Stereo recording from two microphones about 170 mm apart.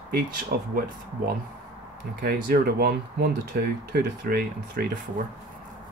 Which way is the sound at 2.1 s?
70° right (ahead or behind).